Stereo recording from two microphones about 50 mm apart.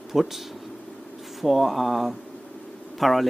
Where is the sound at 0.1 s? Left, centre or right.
Centre.